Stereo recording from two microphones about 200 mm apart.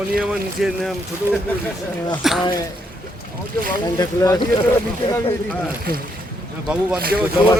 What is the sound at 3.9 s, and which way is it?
Speech, 20° left (ahead or behind).